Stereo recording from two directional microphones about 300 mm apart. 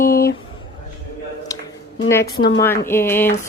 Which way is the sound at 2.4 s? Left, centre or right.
Centre.